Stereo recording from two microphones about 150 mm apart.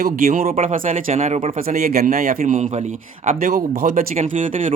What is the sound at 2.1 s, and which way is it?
Speech, 60° right (ahead or behind).